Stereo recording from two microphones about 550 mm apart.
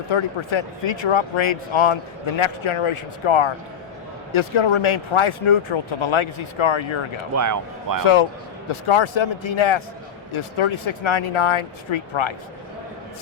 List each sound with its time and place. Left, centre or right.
0.1 s speech: left
7.3 s speech: right
8.0 s speech: left